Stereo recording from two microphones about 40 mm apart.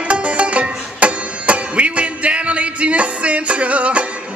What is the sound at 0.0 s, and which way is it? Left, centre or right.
Music, right.